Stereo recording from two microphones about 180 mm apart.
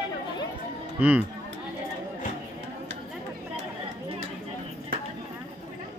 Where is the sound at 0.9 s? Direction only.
10° right (ahead or behind).